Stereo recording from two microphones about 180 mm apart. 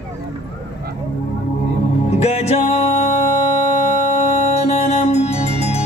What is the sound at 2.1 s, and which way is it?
Music, 35° left (ahead or behind).